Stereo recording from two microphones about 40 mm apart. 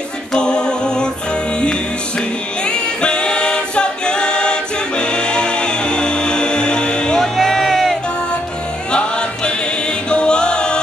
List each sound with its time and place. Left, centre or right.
0.4 s a capella: left
2.6 s singing: left
7.2 s music: centre
10.0 s choir: left